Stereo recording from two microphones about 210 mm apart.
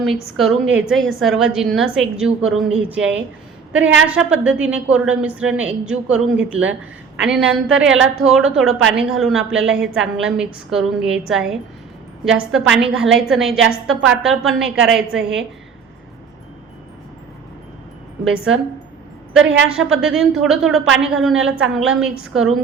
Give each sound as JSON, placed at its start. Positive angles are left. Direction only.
{"t": 0.7, "sound": "a woman's voice", "side_deg": -5}
{"t": 13.9, "sound": "a woman's voice", "side_deg": -60}
{"t": 14.2, "sound": "a woman's voice", "side_deg": 0}
{"t": 19.3, "sound": "a woman's voice", "side_deg": -5}